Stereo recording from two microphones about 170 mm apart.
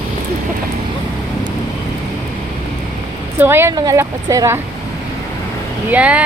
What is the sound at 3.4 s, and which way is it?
A woman's voice, 15° right (ahead or behind).